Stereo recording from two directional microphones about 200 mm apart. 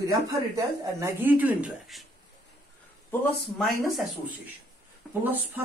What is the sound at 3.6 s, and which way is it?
Speech, centre (ahead or behind).